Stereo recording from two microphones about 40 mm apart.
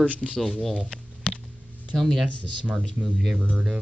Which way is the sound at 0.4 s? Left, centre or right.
Centre.